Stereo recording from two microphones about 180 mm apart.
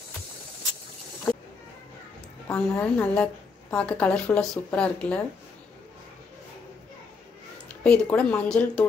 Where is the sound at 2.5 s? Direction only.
10° left (ahead or behind).